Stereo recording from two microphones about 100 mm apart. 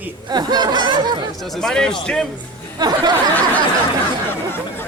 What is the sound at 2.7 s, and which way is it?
Speech, 45° right (ahead or behind).